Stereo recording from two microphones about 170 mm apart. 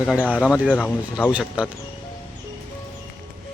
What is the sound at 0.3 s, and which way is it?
Speech, 5° right (ahead or behind).